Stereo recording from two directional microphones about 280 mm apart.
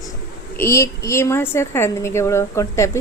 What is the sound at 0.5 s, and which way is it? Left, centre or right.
A woman's voice, centre.